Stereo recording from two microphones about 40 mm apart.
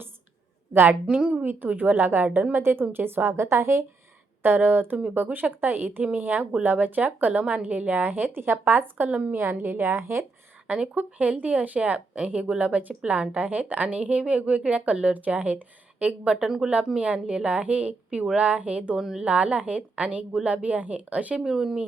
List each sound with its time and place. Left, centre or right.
0.7 s a woman's voice: right
1.1 s a woman's voice: right
2.5 s speech: right
3.2 s a woman's voice: right
4.4 s speech: right
9.0 s a woman's voice: right
9.3 s a woman's voice: right
10.9 s a woman's voice: right
16.4 s speech: centre
17.0 s a woman's voice: right
18.9 s speech: centre
19.2 s a woman's voice: right
21.3 s speech: centre